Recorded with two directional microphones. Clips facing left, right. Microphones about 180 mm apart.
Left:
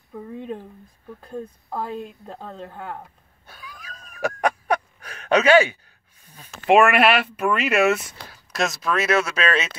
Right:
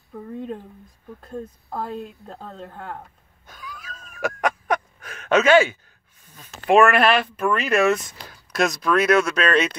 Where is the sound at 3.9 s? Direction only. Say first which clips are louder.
Left 1 dB; 35° left (ahead or behind).